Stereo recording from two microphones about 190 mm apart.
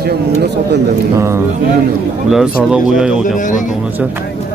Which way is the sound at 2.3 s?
5° right (ahead or behind).